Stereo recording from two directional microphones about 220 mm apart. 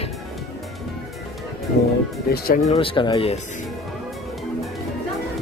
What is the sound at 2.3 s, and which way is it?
Speech, 45° left (ahead or behind).